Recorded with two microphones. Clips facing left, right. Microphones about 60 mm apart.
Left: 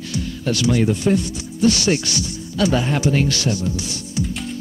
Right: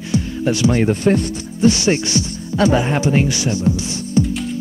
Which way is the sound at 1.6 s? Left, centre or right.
Right.